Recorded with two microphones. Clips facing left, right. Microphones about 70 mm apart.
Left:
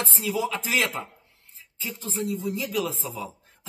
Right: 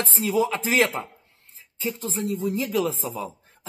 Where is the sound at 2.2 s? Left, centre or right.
Right.